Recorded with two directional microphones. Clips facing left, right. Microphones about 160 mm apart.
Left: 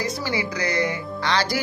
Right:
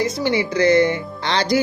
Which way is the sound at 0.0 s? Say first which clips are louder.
Right 6 dB; 25° right (ahead or behind).